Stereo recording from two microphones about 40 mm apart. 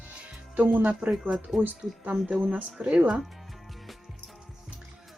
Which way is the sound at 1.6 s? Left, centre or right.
Right.